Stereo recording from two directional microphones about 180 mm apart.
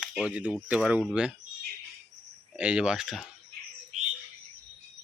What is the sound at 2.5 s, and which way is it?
Speech, 5° right (ahead or behind).